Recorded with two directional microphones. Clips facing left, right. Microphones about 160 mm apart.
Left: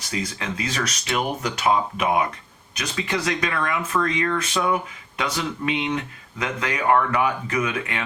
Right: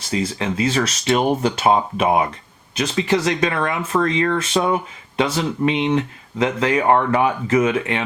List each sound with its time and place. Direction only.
0.1 s speech: 30° right (ahead or behind)